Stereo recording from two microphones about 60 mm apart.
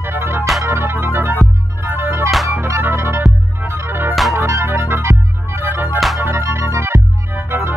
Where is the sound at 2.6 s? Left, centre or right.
Right.